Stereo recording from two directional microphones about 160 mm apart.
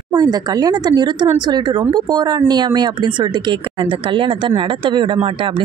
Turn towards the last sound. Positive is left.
turn(degrees=-35)  # may be behind; listen again after turning